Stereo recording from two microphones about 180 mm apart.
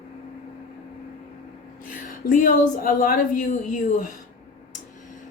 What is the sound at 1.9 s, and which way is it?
A woman's voice, 50° left (ahead or behind).